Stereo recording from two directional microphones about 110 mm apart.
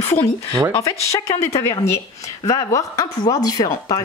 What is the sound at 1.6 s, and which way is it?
Speech, 25° left (ahead or behind).